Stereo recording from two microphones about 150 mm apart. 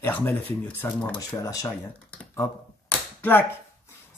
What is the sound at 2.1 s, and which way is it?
Finger snapping, 10° left (ahead or behind).